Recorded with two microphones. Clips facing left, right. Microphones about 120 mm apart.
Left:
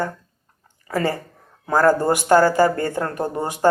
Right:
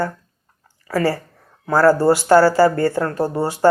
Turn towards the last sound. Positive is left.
turn(degrees=20)  # may be behind; listen again after turning